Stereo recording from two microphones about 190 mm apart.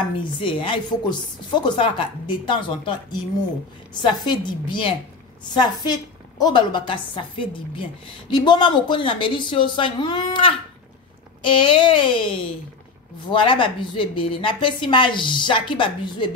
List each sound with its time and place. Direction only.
0.2 s a woman's voice: 25° left (ahead or behind)